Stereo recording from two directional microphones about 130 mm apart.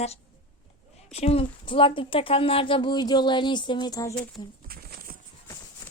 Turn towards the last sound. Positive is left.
turn(degrees=25)  # may be behind; listen again after turning